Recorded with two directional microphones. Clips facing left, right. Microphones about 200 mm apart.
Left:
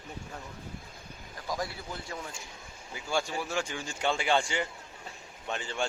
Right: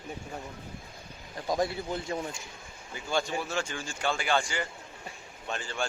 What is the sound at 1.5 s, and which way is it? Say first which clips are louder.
Speech: right 6 dB; 25° right (ahead or behind).